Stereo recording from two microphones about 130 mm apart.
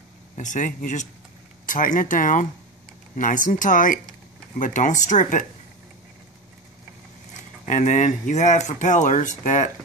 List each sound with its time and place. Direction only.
0.4 s speech: 75° left (ahead or behind); by 4.0 s 90° left
4.6 s speech: 75° left (ahead or behind)
7.6 s speech: 65° left (ahead or behind)